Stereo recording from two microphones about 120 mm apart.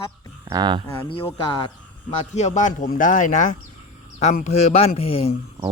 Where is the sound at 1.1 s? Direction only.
45° left (ahead or behind).